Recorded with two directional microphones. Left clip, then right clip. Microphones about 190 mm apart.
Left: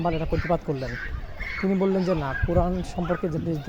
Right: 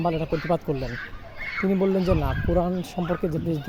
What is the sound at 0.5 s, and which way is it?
Speech, 15° right (ahead or behind).